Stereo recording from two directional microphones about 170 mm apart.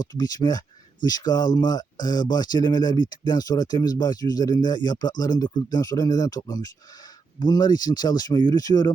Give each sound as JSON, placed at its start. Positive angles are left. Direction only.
{"t": 0.1, "sound": "speech", "side_deg": 25}